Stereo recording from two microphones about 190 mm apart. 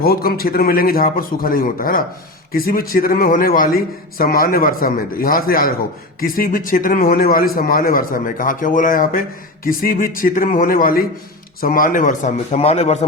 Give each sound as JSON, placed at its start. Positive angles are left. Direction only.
{"t": 0.0, "sound": "speech", "side_deg": 50}